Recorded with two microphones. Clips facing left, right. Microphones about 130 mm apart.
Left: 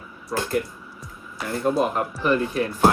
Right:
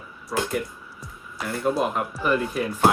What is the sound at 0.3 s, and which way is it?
Speech, centre (ahead or behind).